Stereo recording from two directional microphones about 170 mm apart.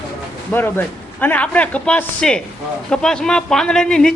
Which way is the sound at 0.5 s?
15° left (ahead or behind).